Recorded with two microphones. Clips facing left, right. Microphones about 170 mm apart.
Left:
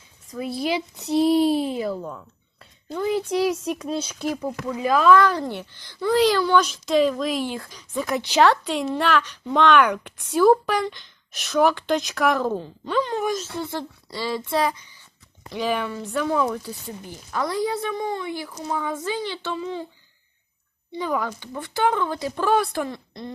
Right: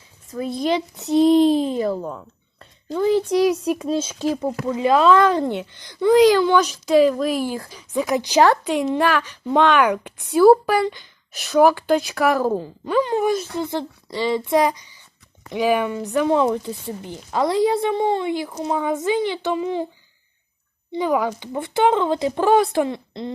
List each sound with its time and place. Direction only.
0.4 s speech: 5° left (ahead or behind)
1.9 s speech: 30° right (ahead or behind)
3.4 s speech: 10° right (ahead or behind)
3.8 s speech: 30° right (ahead or behind); by 19.8 s 15° right (ahead or behind)
20.9 s speech: 15° right (ahead or behind)